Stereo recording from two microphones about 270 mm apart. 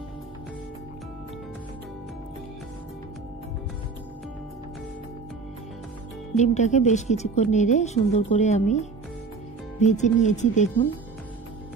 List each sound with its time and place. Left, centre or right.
6.3 s a woman's voice: left